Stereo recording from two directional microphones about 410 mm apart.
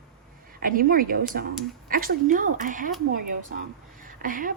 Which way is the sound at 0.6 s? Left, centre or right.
Right.